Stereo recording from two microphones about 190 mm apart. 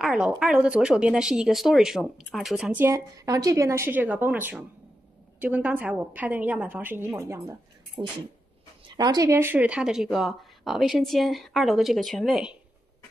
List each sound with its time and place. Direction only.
0.0 s a woman's voice: 5° right (ahead or behind)